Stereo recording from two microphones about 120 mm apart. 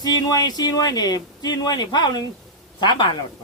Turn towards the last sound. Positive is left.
turn(degrees=40)  # may be behind; listen again after turning